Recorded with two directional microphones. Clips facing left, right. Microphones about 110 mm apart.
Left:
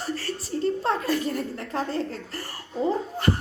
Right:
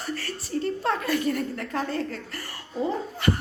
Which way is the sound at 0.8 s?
30° left (ahead or behind).